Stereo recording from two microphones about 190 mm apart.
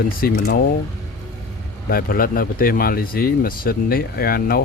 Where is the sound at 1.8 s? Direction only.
50° left (ahead or behind).